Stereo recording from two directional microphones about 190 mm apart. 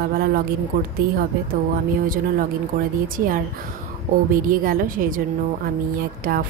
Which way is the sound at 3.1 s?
50° right (ahead or behind).